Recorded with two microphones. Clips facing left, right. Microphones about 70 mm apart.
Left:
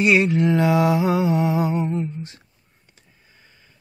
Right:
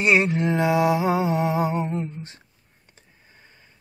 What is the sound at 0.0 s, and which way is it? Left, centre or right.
Music, right.